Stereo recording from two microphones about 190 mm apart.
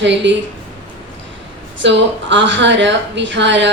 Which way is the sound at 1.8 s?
70° right (ahead or behind).